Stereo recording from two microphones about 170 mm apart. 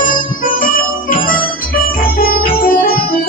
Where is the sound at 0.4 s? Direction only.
55° left (ahead or behind).